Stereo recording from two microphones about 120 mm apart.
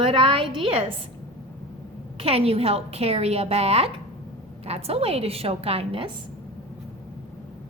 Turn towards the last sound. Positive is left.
turn(degrees=-55)  # may be behind; listen again after turning